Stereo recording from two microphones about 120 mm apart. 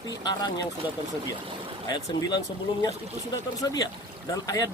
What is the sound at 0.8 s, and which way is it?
Speech, 15° right (ahead or behind).